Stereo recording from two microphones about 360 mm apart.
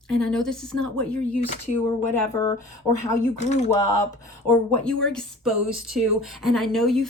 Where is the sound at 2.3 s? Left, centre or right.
Centre.